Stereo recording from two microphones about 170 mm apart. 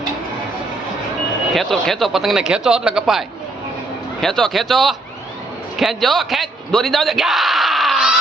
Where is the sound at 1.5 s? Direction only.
Centre (ahead or behind).